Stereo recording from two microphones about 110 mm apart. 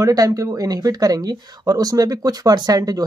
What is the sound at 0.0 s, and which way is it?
Speech, 35° right (ahead or behind).